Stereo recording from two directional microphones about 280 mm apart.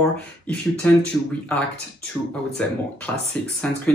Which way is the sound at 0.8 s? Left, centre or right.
Centre.